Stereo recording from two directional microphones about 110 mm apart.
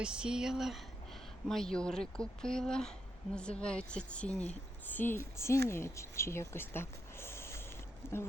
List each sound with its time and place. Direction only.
0.0 s a woman's voice: 5° right (ahead or behind); by 8.2 s 20° left (ahead or behind)